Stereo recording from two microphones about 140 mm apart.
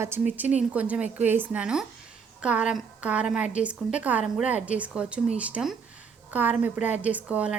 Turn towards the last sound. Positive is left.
turn(degrees=-10)  # may be behind; listen again after turning